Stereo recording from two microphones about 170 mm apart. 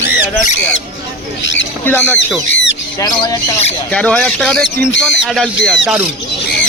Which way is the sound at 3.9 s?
5° left (ahead or behind).